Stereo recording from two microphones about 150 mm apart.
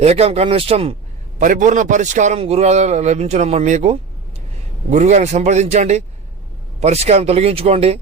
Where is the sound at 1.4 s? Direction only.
60° right (ahead or behind); by 8.0 s 40° right (ahead or behind).